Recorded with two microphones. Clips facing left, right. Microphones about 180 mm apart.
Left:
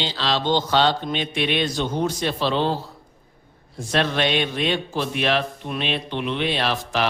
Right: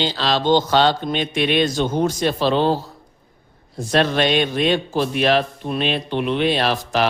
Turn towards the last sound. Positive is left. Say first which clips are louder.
# right 4 dB
turn(degrees=-40)  # may be behind; listen again after turning